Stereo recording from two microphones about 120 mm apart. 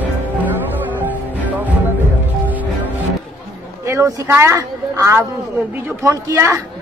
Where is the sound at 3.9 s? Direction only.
25° right (ahead or behind).